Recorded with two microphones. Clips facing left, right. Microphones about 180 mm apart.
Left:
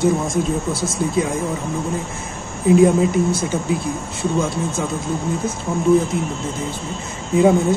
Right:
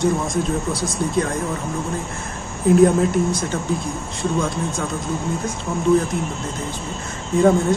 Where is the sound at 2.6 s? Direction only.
Centre (ahead or behind).